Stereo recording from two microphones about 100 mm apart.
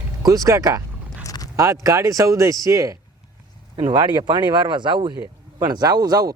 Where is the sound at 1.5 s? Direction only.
30° right (ahead or behind).